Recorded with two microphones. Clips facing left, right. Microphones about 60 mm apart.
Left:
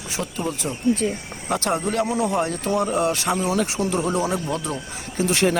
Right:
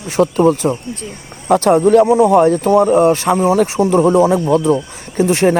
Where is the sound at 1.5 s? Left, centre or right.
Right.